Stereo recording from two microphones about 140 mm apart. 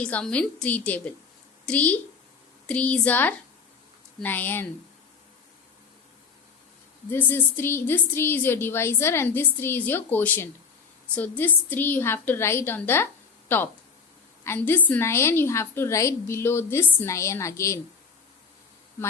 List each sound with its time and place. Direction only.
0.0 s a woman's voice: 10° left (ahead or behind)
7.1 s a woman's voice: 15° left (ahead or behind)
14.4 s a woman's voice: 15° left (ahead or behind)